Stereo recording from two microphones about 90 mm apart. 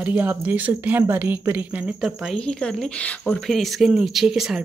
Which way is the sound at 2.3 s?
10° left (ahead or behind).